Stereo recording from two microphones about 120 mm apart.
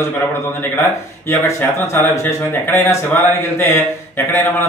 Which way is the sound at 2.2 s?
20° left (ahead or behind).